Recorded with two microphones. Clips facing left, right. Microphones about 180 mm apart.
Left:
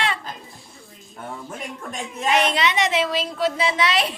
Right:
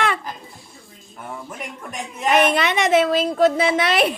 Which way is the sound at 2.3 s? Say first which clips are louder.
Right 3 dB; 55° right (ahead or behind).